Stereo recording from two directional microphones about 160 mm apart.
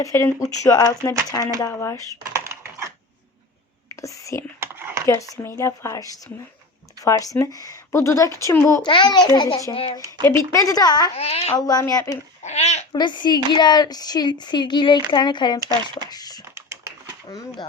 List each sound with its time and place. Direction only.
0.0 s speech: 20° left (ahead or behind)
2.3 s typing: 15° right (ahead or behind)
4.0 s speech: 20° left (ahead or behind)
4.6 s a sound: 15° right (ahead or behind)
5.0 s speech: 20° left (ahead or behind)
8.8 s speech: 30° left (ahead or behind)
9.7 s a child's voice: 35° left (ahead or behind)
10.2 s speech: 20° left (ahead or behind)
11.2 s a child's voice: 40° left (ahead or behind)
11.5 s speech: 25° left (ahead or behind)
12.4 s speech: 45° left (ahead or behind)
12.9 s speech: 25° left (ahead or behind)
16.6 s typing: 20° right (ahead or behind)
17.2 s speech: 25° left (ahead or behind)